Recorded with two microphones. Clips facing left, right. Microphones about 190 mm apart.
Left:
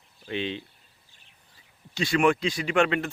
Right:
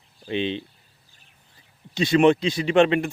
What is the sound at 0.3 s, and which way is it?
Speech, 20° right (ahead or behind).